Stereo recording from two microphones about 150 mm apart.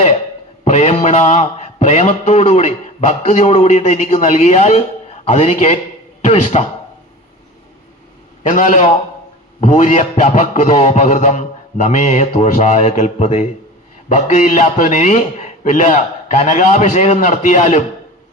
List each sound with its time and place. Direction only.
0.6 s a man's voice: 50° left (ahead or behind)
8.4 s a man's voice: 55° left (ahead or behind)